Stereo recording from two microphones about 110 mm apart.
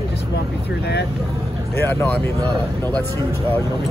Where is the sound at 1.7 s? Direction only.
20° left (ahead or behind).